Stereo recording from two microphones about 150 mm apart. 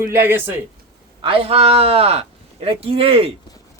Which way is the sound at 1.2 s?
35° right (ahead or behind).